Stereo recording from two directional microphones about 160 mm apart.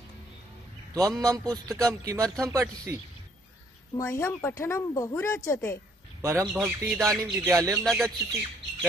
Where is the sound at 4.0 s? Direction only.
15° left (ahead or behind).